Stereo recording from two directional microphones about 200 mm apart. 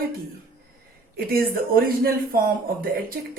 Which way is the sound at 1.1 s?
50° right (ahead or behind).